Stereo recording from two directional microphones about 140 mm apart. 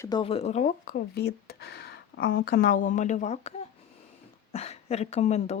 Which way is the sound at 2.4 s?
85° left.